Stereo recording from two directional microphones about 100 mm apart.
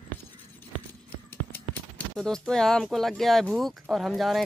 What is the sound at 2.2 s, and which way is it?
Speech, 5° left (ahead or behind).